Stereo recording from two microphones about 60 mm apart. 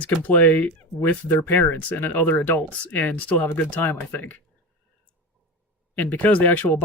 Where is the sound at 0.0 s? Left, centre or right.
Left.